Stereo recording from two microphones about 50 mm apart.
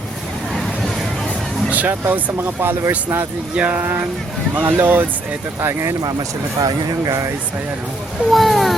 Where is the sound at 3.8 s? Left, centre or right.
Right.